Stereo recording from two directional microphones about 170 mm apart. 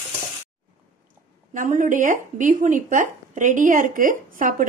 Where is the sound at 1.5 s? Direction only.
50° right (ahead or behind).